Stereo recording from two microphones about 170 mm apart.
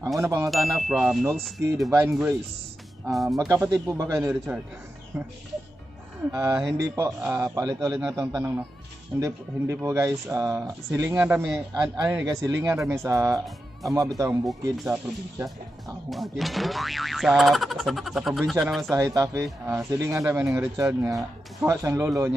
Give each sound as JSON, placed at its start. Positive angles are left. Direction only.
{"t": 0.2, "sound": "speech", "side_deg": -20}
{"t": 0.5, "sound": "speech", "side_deg": 0}
{"t": 1.9, "sound": "speech", "side_deg": -15}
{"t": 3.1, "sound": "speech", "side_deg": 0}
{"t": 3.3, "sound": "speech", "side_deg": -15}
{"t": 4.2, "sound": "speech", "side_deg": 0}
{"t": 6.3, "sound": "speech", "side_deg": -20}
{"t": 16.1, "sound": "speech", "side_deg": 0}
{"t": 18.9, "sound": "speech", "side_deg": -20}